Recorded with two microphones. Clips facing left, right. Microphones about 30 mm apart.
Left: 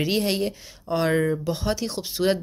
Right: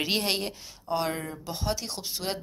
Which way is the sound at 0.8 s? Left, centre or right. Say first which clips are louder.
Left 5 dB; centre.